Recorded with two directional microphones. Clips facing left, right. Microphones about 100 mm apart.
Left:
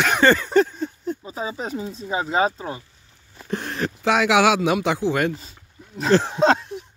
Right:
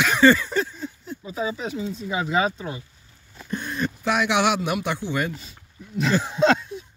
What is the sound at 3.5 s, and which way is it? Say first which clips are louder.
A man's voice: left 1 dB; 90° left.